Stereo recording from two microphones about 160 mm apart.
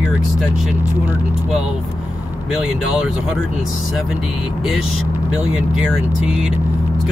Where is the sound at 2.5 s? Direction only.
5° right (ahead or behind).